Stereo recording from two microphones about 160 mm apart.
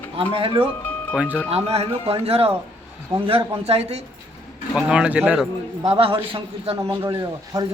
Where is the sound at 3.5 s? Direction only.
40° right (ahead or behind).